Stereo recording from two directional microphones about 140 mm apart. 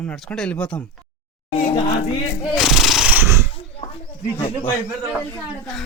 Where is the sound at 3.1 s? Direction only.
20° right (ahead or behind).